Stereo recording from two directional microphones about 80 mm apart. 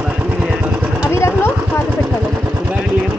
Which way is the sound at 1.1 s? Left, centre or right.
Left.